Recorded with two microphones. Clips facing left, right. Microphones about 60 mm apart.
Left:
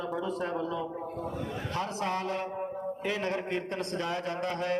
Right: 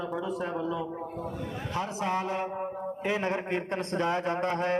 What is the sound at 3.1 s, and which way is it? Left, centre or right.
A man's voice, right.